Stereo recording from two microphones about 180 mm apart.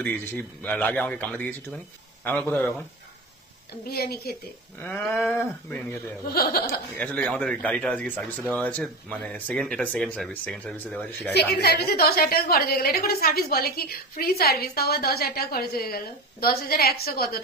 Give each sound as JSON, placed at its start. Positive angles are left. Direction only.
{"t": 0.0, "sound": "speech", "side_deg": 10}
{"t": 3.8, "sound": "a woman's voice", "side_deg": 60}
{"t": 4.7, "sound": "speech", "side_deg": 10}
{"t": 6.2, "sound": "a woman's voice", "side_deg": 55}
{"t": 7.0, "sound": "speech", "side_deg": 10}
{"t": 11.3, "sound": "a woman's voice", "side_deg": 65}